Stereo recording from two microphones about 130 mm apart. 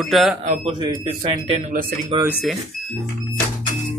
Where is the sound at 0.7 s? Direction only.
35° right (ahead or behind).